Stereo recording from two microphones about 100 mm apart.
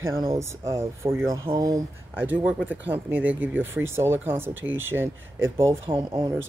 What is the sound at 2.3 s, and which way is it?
Speech, 15° right (ahead or behind).